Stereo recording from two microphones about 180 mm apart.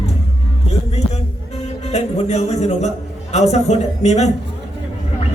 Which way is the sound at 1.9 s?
40° left (ahead or behind).